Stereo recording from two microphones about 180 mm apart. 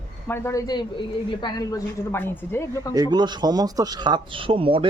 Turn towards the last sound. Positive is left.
turn(degrees=-30)  # may be behind; listen again after turning